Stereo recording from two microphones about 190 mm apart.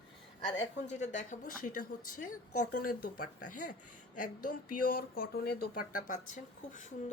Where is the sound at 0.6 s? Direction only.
35° left (ahead or behind).